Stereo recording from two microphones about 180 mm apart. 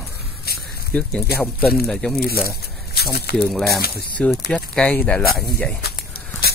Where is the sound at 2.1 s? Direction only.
55° left (ahead or behind).